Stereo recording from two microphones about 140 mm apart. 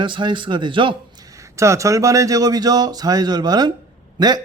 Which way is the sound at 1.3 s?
25° right (ahead or behind).